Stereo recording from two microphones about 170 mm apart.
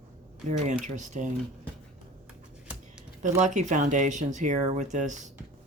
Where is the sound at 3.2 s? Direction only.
45° right (ahead or behind).